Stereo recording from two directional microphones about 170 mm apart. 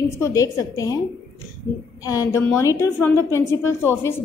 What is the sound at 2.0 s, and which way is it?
A woman's voice, 20° left (ahead or behind).